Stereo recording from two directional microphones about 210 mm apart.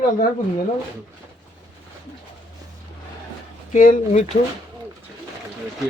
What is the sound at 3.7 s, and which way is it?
Speech, 40° left (ahead or behind).